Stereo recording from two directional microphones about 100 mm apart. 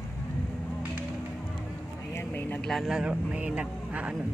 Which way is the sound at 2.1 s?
20° left (ahead or behind).